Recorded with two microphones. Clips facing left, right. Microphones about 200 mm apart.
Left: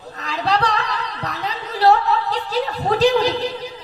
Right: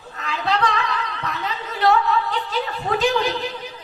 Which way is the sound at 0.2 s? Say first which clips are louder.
Left 2 dB; 35° left (ahead or behind).